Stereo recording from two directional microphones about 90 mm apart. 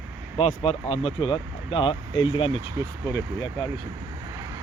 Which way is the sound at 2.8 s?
30° right (ahead or behind).